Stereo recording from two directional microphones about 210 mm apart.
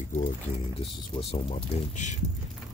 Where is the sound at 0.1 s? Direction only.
35° left (ahead or behind).